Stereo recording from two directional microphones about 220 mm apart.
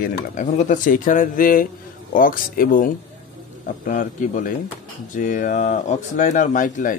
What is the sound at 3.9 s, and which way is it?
Speech, 35° left (ahead or behind).